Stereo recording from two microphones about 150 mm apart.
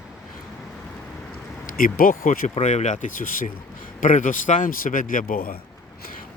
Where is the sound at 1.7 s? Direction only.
70° left (ahead or behind).